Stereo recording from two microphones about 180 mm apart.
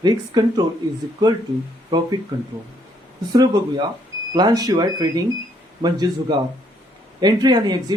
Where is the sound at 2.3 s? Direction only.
25° right (ahead or behind).